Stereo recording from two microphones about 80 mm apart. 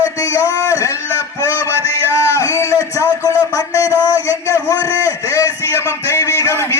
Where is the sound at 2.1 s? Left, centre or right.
Left.